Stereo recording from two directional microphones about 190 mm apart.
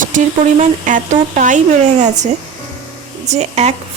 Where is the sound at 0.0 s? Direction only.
40° right (ahead or behind).